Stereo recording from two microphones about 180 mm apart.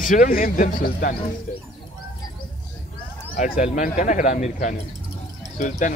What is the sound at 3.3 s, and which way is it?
Speech, 50° left (ahead or behind).